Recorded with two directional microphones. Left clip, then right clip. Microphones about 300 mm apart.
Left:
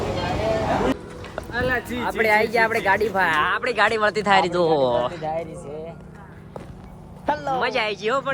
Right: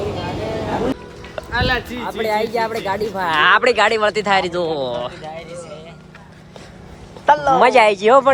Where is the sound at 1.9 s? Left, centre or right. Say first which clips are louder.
Left 1 dB; centre.